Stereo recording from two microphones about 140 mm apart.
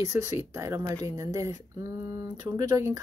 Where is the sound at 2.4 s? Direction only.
25° right (ahead or behind).